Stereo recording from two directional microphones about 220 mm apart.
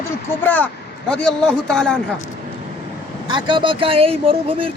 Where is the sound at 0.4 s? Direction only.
5° left (ahead or behind).